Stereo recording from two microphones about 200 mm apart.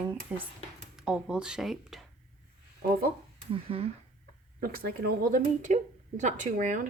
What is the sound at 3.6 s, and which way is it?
Speech, 30° right (ahead or behind).